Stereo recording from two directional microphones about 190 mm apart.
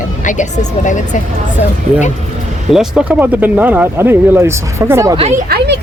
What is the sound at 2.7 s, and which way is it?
Speech, centre (ahead or behind).